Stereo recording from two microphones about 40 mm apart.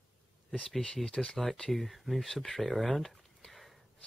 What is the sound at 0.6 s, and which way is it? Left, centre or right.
Speech, centre.